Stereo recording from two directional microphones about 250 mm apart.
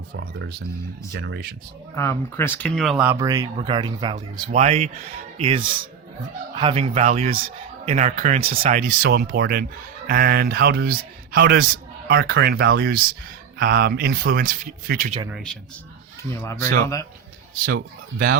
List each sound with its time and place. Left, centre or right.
0.2 s speech: right
2.0 s speech: centre
4.5 s speech: right
15.3 s a man's voice: centre
16.3 s speech: centre
17.7 s speech: right